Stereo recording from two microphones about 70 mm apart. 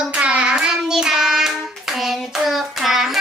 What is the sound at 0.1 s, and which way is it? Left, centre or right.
Child singing, centre.